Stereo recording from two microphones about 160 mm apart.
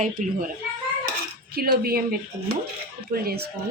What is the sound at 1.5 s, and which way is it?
Speech, 70° right (ahead or behind).